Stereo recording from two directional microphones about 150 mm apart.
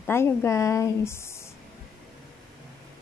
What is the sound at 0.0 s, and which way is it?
A woman's voice, 15° left (ahead or behind).